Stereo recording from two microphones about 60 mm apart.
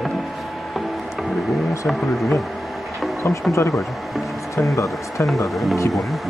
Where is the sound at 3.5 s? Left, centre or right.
Left.